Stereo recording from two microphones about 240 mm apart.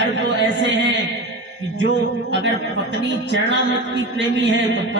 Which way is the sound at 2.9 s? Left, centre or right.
Right.